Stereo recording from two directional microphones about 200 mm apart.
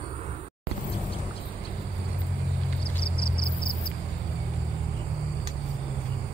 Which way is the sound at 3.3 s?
50° left (ahead or behind).